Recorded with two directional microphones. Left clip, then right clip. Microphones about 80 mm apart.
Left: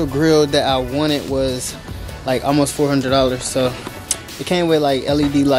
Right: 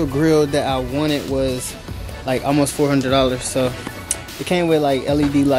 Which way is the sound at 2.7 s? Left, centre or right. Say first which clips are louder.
Left 1 dB; centre.